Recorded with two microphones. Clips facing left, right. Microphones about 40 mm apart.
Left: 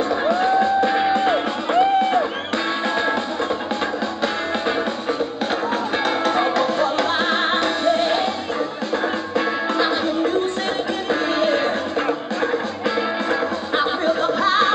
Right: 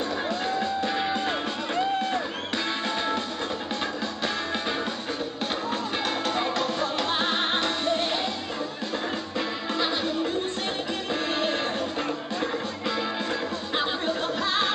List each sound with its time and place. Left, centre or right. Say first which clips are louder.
0.2 s music: left 10 dB; left
6.0 s music: left 8 dB; centre
9.8 s music: left 5 dB; centre